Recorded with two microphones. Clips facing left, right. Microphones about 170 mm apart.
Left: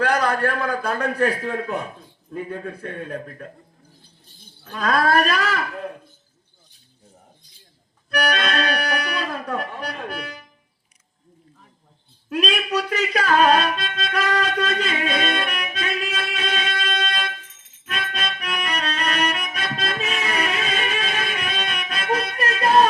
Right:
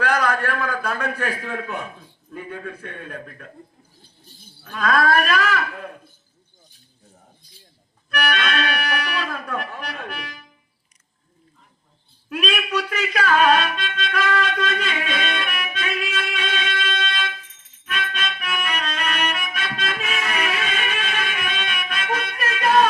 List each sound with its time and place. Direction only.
0.0 s a man's voice: 35° left (ahead or behind)
4.8 s a man's voice: 35° left (ahead or behind)
8.1 s accordion: 35° left (ahead or behind)
12.3 s music: 35° left (ahead or behind)